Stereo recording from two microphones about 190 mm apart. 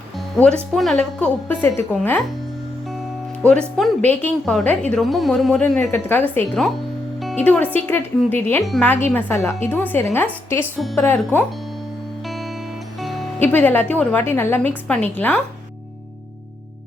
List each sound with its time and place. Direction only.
0.3 s a woman's voice: 5° left (ahead or behind)
3.4 s a woman's voice: 5° left (ahead or behind)
13.0 s music: centre (ahead or behind)
13.4 s a woman's voice: 10° left (ahead or behind)